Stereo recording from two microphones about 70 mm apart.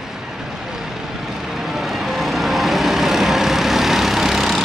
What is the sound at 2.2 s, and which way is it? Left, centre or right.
Vehicle, centre.